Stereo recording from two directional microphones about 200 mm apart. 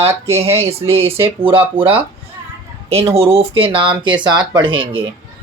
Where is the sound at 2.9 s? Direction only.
30° right (ahead or behind).